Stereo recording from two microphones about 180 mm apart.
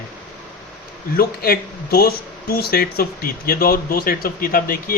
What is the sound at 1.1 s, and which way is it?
A man's voice, 55° left (ahead or behind).